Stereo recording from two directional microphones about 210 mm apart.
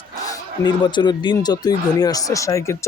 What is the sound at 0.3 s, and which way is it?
Speech, 20° left (ahead or behind).